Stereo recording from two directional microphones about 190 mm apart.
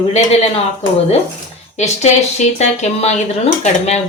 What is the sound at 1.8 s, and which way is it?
Speech, 35° left (ahead or behind).